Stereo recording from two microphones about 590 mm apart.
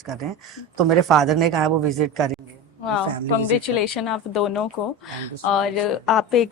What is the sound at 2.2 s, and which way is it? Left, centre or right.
Speech, centre.